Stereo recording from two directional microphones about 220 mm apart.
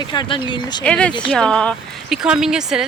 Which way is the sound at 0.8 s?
5° left (ahead or behind).